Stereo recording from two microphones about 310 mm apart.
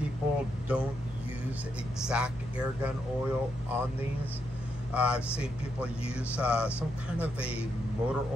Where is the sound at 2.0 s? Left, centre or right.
Centre.